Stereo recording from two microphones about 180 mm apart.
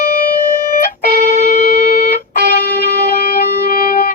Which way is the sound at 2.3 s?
60° left (ahead or behind).